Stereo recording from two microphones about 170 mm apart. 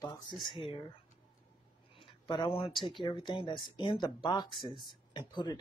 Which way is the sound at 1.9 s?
25° left (ahead or behind).